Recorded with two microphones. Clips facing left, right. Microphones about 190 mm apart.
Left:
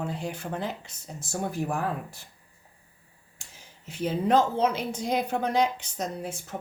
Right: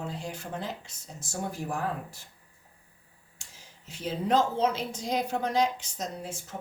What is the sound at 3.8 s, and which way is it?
Speech, 60° left (ahead or behind).